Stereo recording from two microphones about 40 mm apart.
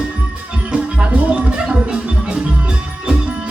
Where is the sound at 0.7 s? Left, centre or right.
Right.